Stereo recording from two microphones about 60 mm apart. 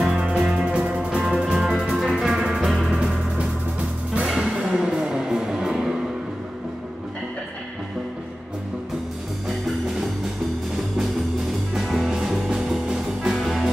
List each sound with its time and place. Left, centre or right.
0.0 s music: centre
2.9 s music: centre
11.8 s music: centre